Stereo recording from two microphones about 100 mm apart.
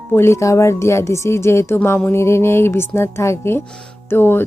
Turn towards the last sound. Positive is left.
turn(degrees=20)  # may be behind; listen again after turning